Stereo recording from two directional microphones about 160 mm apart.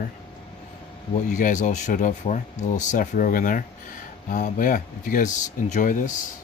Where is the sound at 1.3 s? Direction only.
50° left (ahead or behind).